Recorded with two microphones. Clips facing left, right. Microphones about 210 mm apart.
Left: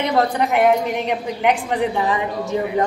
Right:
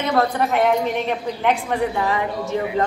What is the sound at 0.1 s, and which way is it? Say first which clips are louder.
Speech: right 2 dB; 15° left (ahead or behind).